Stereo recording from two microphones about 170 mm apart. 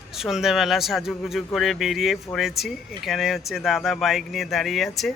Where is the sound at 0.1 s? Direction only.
Centre (ahead or behind).